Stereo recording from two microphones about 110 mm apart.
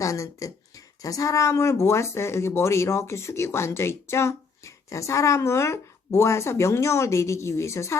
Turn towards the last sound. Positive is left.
turn(degrees=25)  # may be behind; listen again after turning